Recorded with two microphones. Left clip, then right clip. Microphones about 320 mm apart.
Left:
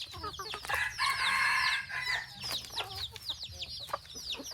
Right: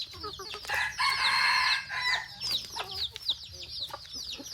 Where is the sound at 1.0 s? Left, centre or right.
Right.